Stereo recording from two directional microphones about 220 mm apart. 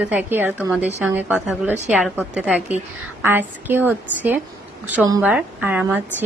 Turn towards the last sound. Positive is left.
turn(degrees=-10)  # may be behind; listen again after turning